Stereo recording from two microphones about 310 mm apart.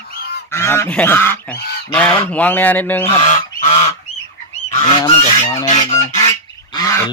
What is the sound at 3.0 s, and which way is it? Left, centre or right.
Goose, centre.